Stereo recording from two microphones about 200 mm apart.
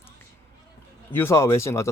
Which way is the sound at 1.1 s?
10° left (ahead or behind).